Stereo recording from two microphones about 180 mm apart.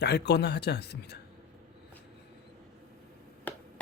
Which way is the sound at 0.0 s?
65° left (ahead or behind).